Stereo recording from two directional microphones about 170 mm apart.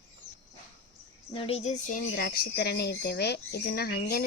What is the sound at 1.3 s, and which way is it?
Speech, 35° left (ahead or behind).